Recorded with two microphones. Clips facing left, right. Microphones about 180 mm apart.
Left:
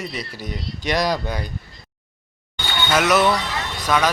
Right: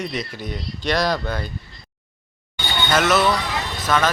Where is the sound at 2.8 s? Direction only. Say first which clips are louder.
Left 1 dB; 10° left (ahead or behind).